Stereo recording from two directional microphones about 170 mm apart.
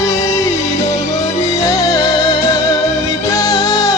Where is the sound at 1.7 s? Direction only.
20° left (ahead or behind).